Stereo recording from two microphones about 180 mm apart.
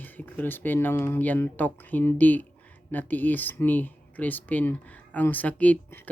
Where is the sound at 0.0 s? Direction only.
10° left (ahead or behind).